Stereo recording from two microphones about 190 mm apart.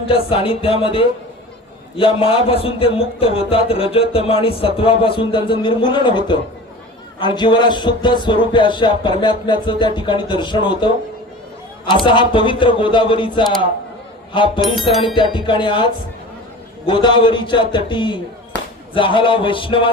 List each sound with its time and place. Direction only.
0.1 s a man's voice: 30° left (ahead or behind)
11.9 s a man's voice: 25° left (ahead or behind)